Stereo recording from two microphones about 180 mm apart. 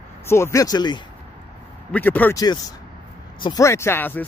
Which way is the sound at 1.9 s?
10° left (ahead or behind).